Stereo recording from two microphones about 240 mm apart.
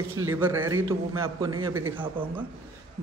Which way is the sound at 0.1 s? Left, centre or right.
Right.